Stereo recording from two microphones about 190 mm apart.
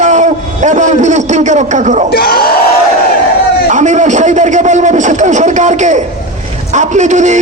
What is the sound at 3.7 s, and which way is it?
A man's voice, 40° right (ahead or behind).